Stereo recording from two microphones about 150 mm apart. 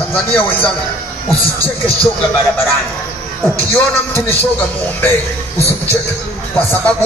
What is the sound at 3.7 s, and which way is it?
Speech, 15° left (ahead or behind).